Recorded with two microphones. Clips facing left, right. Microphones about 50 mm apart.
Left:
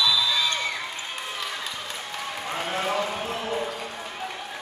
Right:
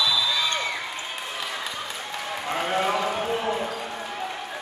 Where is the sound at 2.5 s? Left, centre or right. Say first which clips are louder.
Right 4 dB; centre.